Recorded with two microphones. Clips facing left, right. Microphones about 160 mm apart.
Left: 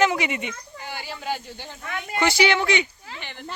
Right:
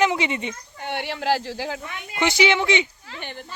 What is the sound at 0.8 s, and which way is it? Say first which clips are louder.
Speech: right 10 dB; 65° right (ahead or behind).